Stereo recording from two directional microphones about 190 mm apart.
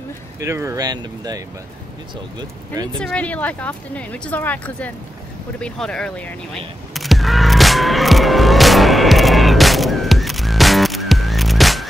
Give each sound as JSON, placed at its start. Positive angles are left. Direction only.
{"t": 0.4, "sound": "speech", "side_deg": -15}
{"t": 3.0, "sound": "speech", "side_deg": 5}
{"t": 5.6, "sound": "vehicle", "side_deg": 5}